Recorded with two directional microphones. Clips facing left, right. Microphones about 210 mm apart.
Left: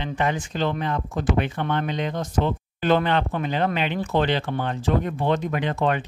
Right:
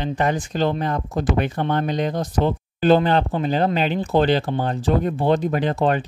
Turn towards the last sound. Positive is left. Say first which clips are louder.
# right 4 dB
turn(degrees=-35)  # may be behind; listen again after turning